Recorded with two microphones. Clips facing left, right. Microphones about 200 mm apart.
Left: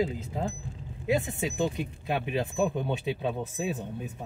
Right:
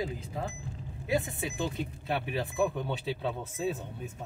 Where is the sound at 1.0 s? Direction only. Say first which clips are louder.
Left 3 dB; 20° left (ahead or behind).